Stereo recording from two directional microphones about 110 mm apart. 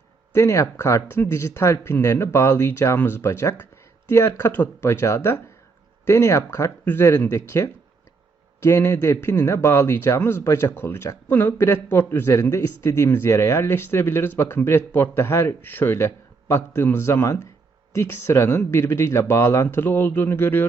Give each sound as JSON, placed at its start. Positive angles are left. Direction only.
{"t": 0.3, "sound": "speech", "side_deg": 25}